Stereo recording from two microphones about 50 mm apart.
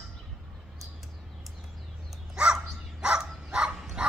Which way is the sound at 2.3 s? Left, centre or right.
Centre.